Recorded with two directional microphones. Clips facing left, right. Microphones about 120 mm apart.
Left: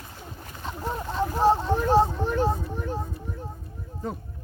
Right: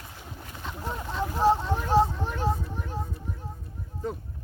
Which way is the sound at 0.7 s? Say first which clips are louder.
Left 3 dB; 25° left (ahead or behind).